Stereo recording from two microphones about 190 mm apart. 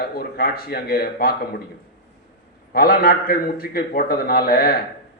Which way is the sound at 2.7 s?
50° left (ahead or behind).